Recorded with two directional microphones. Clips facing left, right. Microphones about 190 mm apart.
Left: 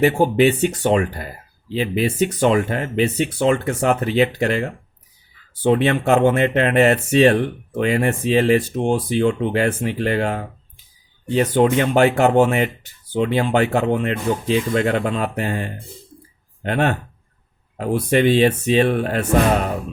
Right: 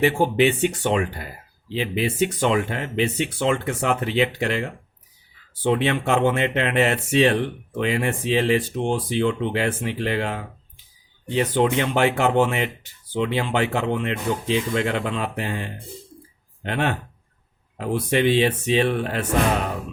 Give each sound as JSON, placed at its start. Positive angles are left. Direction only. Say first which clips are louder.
{"t": 0.0, "sound": "speech", "louder": "left 4 dB", "side_deg": 45}